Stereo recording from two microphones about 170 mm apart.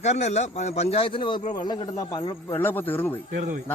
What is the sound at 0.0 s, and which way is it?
A man's voice, 40° left (ahead or behind).